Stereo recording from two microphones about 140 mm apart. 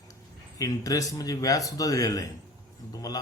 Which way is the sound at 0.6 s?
25° left (ahead or behind).